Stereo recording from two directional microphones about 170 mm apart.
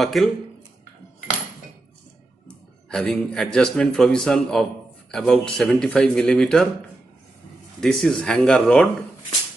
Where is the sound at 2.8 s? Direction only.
5° left (ahead or behind).